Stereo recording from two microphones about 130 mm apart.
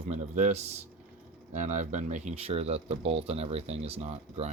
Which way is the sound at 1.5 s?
70° right (ahead or behind).